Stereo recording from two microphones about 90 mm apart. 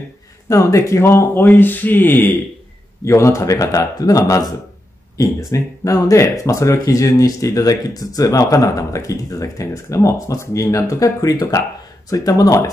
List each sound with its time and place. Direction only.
0.5 s speech: 35° left (ahead or behind)
3.1 s speech: 35° left (ahead or behind)